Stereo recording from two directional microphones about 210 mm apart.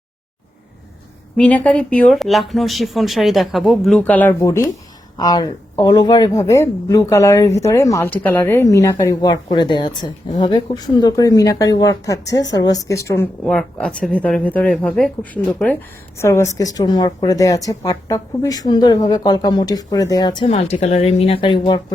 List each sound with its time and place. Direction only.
1.4 s speech: 5° left (ahead or behind); by 21.9 s 20° left (ahead or behind)